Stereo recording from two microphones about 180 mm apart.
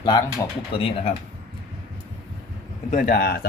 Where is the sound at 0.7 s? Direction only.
30° left (ahead or behind).